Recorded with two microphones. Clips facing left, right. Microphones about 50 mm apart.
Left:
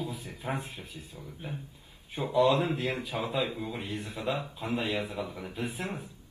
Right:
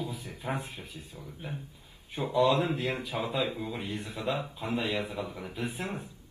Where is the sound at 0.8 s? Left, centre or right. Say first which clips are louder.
Even; right.